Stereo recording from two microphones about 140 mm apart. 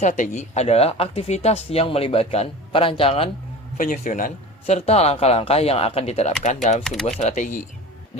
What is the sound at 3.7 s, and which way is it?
Speech, 70° left (ahead or behind).